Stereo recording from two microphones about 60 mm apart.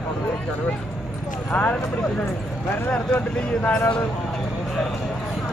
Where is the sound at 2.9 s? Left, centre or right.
Left.